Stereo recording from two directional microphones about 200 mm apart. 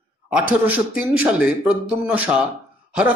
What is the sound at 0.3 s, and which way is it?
A man's voice, 5° right (ahead or behind).